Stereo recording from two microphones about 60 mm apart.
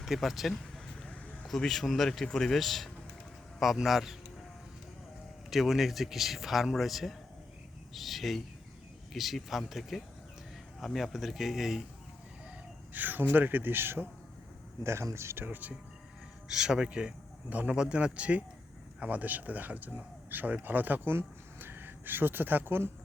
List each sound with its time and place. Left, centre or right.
0.0 s speech: centre
1.0 s a sound: left
1.5 s speech: centre
5.5 s speech: centre
12.9 s speech: right
14.8 s speech: right
15.4 s speech: right
16.5 s speech: centre; by 22.9 s right